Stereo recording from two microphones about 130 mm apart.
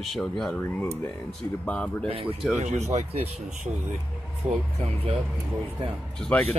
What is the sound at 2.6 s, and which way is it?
Speech, 60° right (ahead or behind).